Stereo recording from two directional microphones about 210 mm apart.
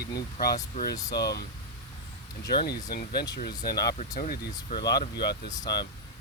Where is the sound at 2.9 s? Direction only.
50° left (ahead or behind).